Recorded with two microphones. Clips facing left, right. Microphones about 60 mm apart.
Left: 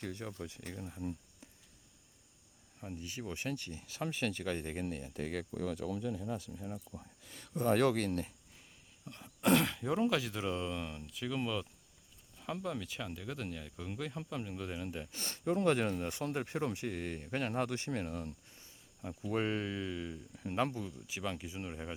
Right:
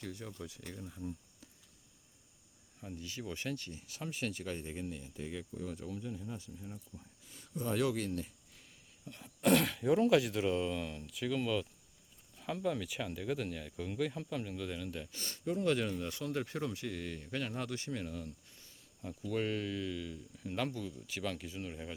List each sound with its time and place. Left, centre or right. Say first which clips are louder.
0.0 s speech: left 2 dB; left
2.8 s speech: left 1 dB; left
5.5 s speech: left 5 dB; left
7.3 s a sound: left 4 dB; left
7.5 s speech: left 4 dB; left
9.0 s speech: even; centre
14.5 s speech: even; centre
15.1 s speech: left 4 dB; left
20.9 s speech: even; centre